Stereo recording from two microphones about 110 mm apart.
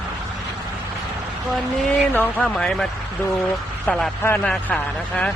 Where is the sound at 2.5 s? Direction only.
5° left (ahead or behind).